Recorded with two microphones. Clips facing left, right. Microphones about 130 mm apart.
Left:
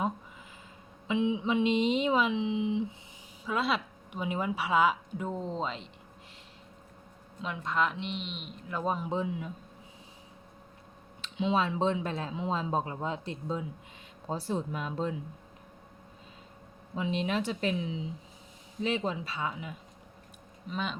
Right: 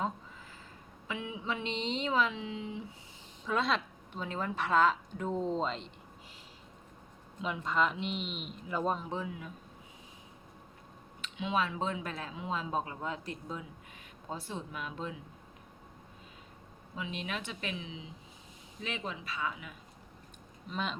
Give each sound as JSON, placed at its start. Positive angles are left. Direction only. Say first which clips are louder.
{"t": 1.0, "sound": "speech", "louder": "left 9 dB", "side_deg": 20}
{"t": 3.4, "sound": "speech", "louder": "left 1 dB", "side_deg": 5}
{"t": 7.4, "sound": "speech", "louder": "even", "side_deg": 0}
{"t": 9.0, "sound": "speech", "louder": "left 6 dB", "side_deg": 25}
{"t": 11.2, "sound": "speech", "louder": "left 4 dB", "side_deg": 30}
{"t": 14.3, "sound": "speech", "louder": "left 7 dB", "side_deg": 35}
{"t": 16.9, "sound": "speech", "louder": "left 8 dB", "side_deg": 30}
{"t": 20.7, "sound": "speech", "louder": "left 2 dB", "side_deg": 0}